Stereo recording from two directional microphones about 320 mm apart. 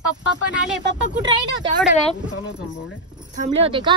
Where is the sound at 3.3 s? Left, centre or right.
Right.